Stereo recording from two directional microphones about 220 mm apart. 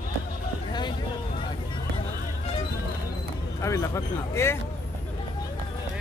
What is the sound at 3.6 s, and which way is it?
Speech, 15° left (ahead or behind).